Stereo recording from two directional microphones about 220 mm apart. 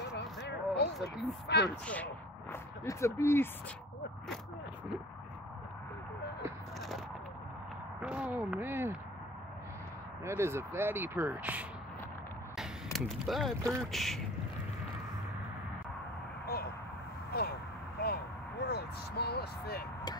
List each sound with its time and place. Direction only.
0.4 s a sound: 50° left (ahead or behind)
1.5 s speech: 50° left (ahead or behind)
2.5 s speech: 15° left (ahead or behind)
8.0 s speech: 5° right (ahead or behind)
10.2 s speech: 10° right (ahead or behind)
12.9 s speech: centre (ahead or behind)
13.6 s speech: 15° right (ahead or behind)
13.9 s speech: centre (ahead or behind)
17.3 s a sound: 45° left (ahead or behind)